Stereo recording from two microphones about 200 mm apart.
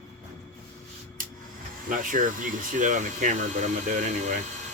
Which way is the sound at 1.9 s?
40° right (ahead or behind).